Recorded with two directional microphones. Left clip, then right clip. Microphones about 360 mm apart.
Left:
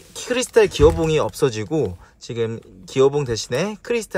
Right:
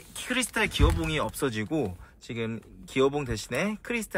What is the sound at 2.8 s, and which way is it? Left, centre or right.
Speech, centre.